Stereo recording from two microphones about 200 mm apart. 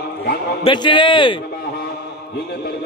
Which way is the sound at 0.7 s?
25° left (ahead or behind).